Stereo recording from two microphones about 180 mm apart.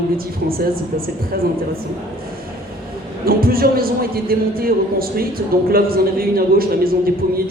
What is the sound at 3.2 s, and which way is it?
A man's voice, 55° right (ahead or behind).